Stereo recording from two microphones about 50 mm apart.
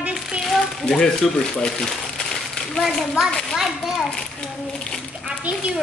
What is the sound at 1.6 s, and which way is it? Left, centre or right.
Crumpling, centre.